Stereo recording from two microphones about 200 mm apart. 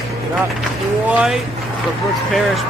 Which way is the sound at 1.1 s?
5° right (ahead or behind).